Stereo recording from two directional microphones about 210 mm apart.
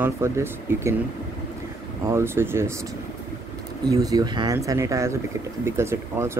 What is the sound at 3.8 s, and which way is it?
Speech, 15° right (ahead or behind).